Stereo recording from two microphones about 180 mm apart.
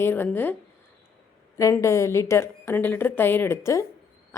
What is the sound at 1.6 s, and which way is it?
A woman's voice, 15° left (ahead or behind).